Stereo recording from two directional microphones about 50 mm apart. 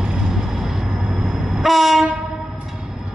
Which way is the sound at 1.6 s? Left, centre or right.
Centre.